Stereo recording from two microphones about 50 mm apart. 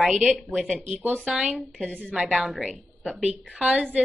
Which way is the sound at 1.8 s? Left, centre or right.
Centre.